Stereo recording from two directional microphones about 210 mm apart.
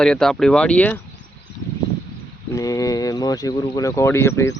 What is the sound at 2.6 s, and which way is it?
Speech, 15° left (ahead or behind).